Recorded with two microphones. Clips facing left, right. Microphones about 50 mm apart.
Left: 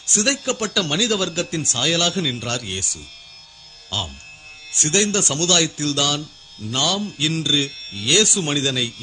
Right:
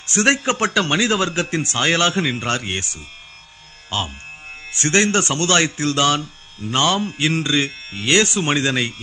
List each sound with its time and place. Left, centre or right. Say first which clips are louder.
0.0 s speech: right 5 dB; right